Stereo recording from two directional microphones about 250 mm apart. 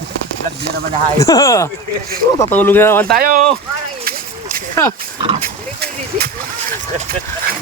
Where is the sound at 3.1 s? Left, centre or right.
Right.